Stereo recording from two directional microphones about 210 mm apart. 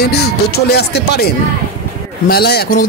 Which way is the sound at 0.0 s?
50° left (ahead or behind).